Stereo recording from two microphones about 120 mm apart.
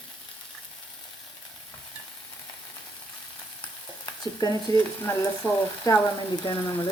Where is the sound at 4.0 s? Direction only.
35° left (ahead or behind).